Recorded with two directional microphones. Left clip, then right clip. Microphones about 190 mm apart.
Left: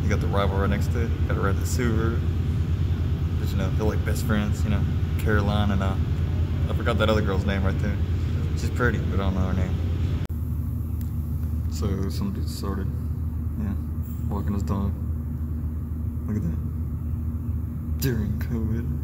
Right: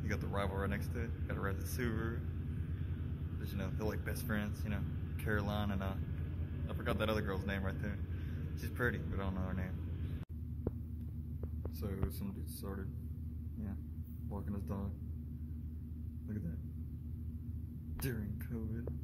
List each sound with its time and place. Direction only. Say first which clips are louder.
0.1 s speech: left 13 dB; 5° left (ahead or behind)
3.5 s speech: left 13 dB; centre (ahead or behind)
11.8 s speech: left 14 dB; centre (ahead or behind)
14.3 s speech: left 14 dB; centre (ahead or behind)
18.0 s speech: left 15 dB; centre (ahead or behind)